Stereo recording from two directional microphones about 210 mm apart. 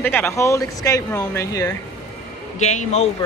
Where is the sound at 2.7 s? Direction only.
30° left (ahead or behind).